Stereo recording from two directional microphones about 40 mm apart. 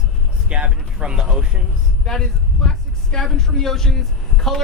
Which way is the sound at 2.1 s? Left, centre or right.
Centre.